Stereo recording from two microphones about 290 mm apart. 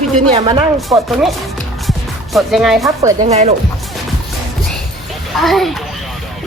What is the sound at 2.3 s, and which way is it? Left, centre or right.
Speech, centre.